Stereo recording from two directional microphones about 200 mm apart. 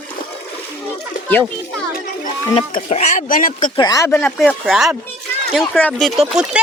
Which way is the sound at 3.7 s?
20° left (ahead or behind).